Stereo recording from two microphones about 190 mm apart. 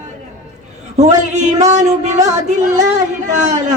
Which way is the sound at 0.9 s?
40° right (ahead or behind).